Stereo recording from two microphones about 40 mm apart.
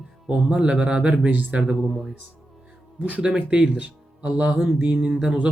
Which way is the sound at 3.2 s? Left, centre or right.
Right.